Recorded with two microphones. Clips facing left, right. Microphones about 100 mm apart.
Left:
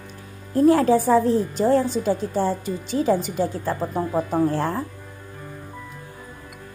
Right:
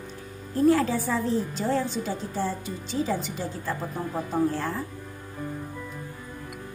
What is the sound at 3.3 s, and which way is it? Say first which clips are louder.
Speech: left 7 dB; 55° left (ahead or behind).